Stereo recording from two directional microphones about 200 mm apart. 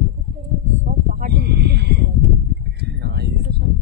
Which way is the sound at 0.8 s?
45° right (ahead or behind).